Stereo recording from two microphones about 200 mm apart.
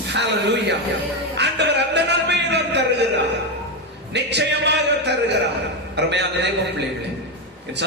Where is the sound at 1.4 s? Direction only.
60° right (ahead or behind).